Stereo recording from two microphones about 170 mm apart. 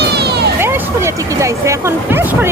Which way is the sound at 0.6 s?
15° right (ahead or behind).